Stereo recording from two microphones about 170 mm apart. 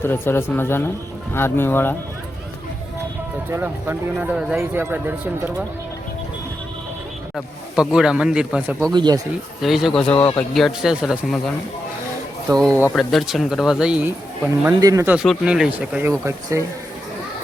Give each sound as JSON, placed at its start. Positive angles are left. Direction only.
{"t": 0.0, "sound": "speech", "side_deg": 15}
{"t": 3.5, "sound": "speech", "side_deg": -15}
{"t": 7.3, "sound": "speech", "side_deg": 0}
{"t": 8.9, "sound": "speech", "side_deg": -25}
{"t": 9.6, "sound": "speech", "side_deg": 0}
{"t": 12.5, "sound": "speech", "side_deg": 5}
{"t": 14.8, "sound": "speech", "side_deg": -20}
{"t": 15.1, "sound": "speech", "side_deg": -5}
{"t": 16.2, "sound": "speech", "side_deg": -15}